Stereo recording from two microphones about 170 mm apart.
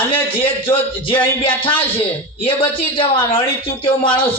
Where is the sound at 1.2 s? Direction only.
30° left (ahead or behind).